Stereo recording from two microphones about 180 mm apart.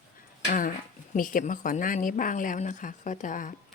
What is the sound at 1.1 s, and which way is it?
A woman's voice, 50° left (ahead or behind).